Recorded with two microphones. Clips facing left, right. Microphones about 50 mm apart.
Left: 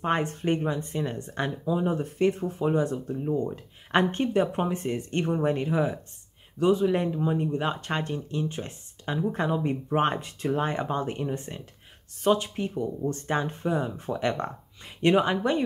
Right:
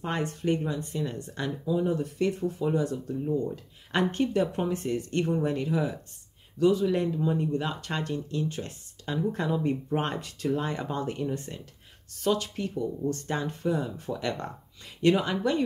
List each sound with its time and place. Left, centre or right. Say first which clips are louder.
0.0 s speech: left 3 dB; left